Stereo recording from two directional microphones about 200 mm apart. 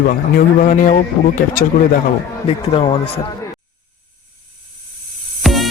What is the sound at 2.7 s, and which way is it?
Speech, 30° left (ahead or behind).